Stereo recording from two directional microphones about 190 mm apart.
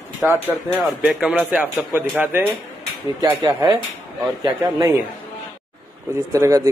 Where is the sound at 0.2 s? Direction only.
10° right (ahead or behind).